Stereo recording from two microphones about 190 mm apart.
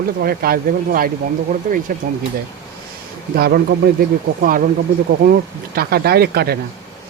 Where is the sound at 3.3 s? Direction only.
55° right (ahead or behind).